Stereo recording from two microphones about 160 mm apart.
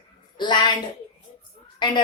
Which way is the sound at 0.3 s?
30° left (ahead or behind).